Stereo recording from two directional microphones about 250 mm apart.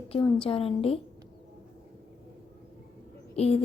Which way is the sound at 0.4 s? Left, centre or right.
Left.